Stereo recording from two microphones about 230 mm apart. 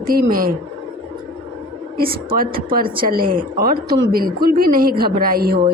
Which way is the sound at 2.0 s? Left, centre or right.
Right.